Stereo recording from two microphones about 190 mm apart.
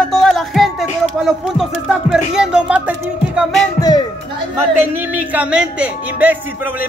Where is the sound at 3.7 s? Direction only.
20° left (ahead or behind).